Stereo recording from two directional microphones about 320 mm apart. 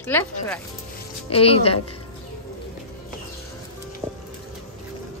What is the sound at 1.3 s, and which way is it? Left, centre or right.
Speech, centre.